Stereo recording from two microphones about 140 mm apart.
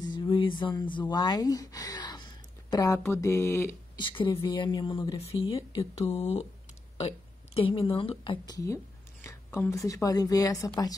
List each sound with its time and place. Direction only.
0.1 s a sound: 35° left (ahead or behind)
1.1 s speech: 30° left (ahead or behind)
4.0 s speech: 35° left (ahead or behind)
5.6 s a woman's voice: 45° left (ahead or behind)
8.5 s a woman's voice: 20° left (ahead or behind)